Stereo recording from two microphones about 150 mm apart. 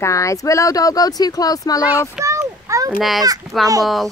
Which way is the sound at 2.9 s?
Centre (ahead or behind).